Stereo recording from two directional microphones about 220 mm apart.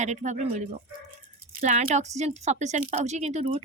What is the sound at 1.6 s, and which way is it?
A woman's voice, 35° right (ahead or behind).